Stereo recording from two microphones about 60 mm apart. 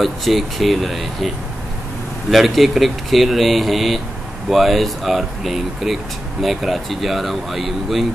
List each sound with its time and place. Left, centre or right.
0.0 s speech: centre
2.3 s speech: centre